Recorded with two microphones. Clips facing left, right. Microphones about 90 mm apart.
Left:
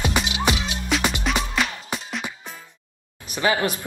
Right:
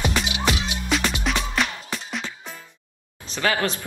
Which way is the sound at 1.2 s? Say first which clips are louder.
Left 1 dB; centre (ahead or behind).